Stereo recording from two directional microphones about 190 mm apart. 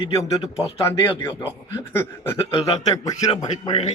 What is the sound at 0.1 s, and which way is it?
A man's voice, 15° left (ahead or behind).